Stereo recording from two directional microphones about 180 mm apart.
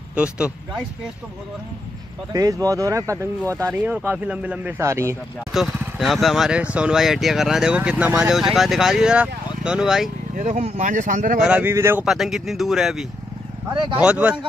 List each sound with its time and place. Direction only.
0.1 s speech: 5° right (ahead or behind)
2.3 s speech: 20° right (ahead or behind)
5.5 s speech: centre (ahead or behind)
10.3 s speech: 40° right (ahead or behind)
11.4 s speech: 10° right (ahead or behind)
12.0 s speech: centre (ahead or behind)